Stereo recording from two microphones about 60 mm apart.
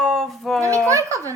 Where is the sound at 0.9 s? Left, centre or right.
Right.